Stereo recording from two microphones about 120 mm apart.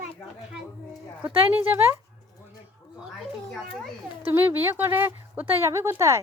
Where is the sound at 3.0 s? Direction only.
Centre (ahead or behind).